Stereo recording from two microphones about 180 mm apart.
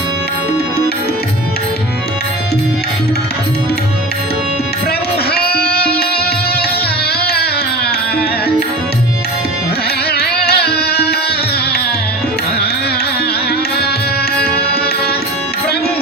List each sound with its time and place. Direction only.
5.3 s music: 60° left (ahead or behind)
10.1 s music: 60° left (ahead or behind)